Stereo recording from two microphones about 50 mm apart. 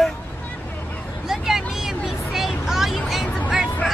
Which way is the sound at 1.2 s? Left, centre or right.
Centre.